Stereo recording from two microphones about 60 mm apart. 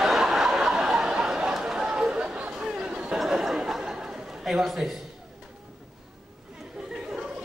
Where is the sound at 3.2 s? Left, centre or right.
Centre.